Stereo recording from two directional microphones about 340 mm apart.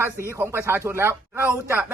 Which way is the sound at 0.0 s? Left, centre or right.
Centre.